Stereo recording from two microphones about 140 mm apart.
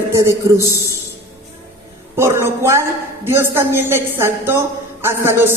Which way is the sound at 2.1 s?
15° right (ahead or behind).